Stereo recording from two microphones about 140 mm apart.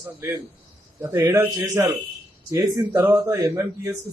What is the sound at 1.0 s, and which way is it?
A man's voice, 15° right (ahead or behind).